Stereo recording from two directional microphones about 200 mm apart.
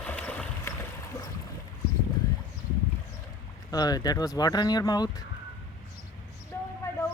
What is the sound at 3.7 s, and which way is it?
Speech, 20° left (ahead or behind).